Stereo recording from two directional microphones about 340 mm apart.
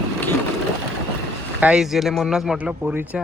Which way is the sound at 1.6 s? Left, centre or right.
Centre.